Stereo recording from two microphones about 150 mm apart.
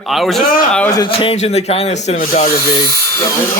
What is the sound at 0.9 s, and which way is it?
Speech, 35° left (ahead or behind).